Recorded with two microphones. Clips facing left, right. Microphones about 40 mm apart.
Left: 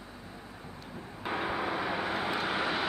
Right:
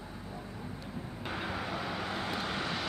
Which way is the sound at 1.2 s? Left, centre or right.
Centre.